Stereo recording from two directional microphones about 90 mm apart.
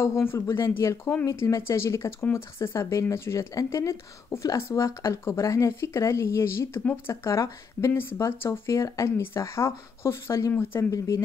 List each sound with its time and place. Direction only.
0.0 s speech: 30° left (ahead or behind)
6.8 s speech: 15° left (ahead or behind)
7.2 s speech: 30° left (ahead or behind)